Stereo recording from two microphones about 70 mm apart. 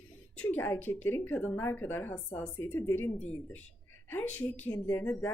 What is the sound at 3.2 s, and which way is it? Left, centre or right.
A woman's voice, left.